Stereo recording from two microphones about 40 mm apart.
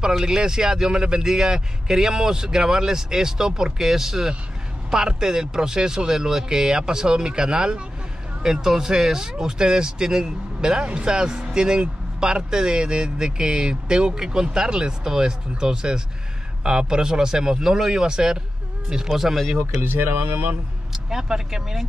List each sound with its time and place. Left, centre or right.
0.2 s a man's voice: centre
19.8 s speech: right
20.9 s speech: centre